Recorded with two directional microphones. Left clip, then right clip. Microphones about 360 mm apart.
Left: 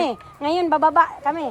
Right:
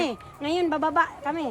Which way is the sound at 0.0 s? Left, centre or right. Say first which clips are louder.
Left 6 dB; centre.